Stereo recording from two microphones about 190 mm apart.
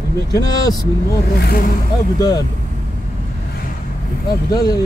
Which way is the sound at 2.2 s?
20° left (ahead or behind).